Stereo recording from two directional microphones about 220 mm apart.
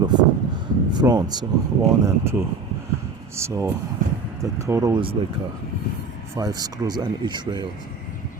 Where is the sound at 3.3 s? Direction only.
10° right (ahead or behind).